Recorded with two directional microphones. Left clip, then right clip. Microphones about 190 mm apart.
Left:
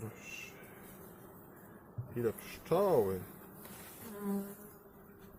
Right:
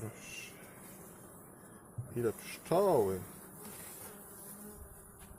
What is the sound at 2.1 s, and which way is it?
Speech, 25° right (ahead or behind).